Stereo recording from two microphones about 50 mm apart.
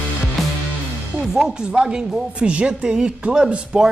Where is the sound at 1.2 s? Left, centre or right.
Centre.